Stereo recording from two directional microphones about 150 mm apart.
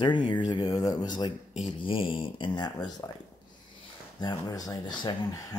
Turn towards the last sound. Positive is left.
turn(degrees=25)  # may be behind; listen again after turning